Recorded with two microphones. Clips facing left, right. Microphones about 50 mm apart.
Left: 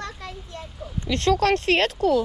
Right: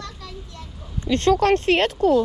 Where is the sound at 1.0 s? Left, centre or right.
Right.